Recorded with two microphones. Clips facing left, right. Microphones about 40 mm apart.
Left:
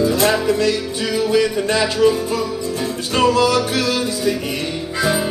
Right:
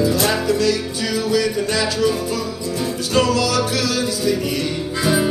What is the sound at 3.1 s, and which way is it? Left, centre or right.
Music, left.